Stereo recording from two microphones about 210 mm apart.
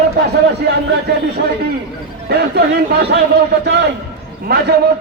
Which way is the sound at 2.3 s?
50° right (ahead or behind).